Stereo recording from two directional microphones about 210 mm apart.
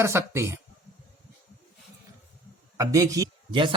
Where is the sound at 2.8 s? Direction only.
15° right (ahead or behind).